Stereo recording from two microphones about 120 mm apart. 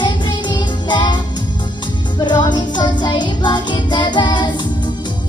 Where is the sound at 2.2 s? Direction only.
35° left (ahead or behind).